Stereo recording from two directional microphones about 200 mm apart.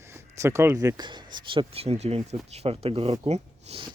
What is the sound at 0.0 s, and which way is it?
Speech, 15° right (ahead or behind).